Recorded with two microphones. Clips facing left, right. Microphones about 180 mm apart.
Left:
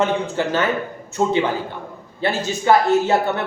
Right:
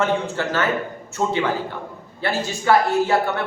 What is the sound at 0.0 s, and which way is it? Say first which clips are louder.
A man's voice: left 2 dB; 15° left (ahead or behind).